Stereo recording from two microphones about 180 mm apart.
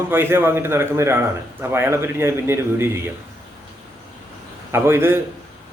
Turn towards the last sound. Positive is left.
turn(degrees=-15)  # may be behind; listen again after turning